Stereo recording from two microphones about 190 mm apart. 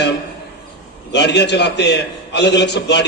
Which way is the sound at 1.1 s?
65° left (ahead or behind).